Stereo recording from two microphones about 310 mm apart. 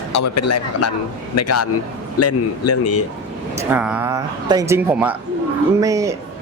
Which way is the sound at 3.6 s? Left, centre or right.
Centre.